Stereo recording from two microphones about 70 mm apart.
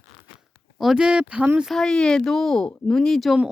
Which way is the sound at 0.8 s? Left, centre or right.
Centre.